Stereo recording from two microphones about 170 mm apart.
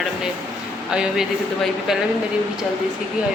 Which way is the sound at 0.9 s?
5° right (ahead or behind).